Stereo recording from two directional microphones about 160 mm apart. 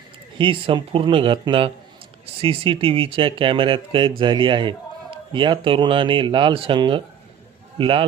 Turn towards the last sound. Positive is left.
turn(degrees=-35)  # may be behind; listen again after turning